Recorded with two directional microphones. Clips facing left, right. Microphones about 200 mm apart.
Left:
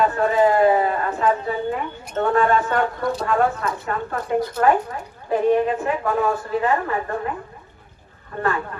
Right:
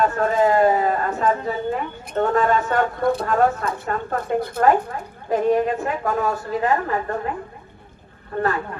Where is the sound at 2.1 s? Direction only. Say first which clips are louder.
Even; 40° right (ahead or behind).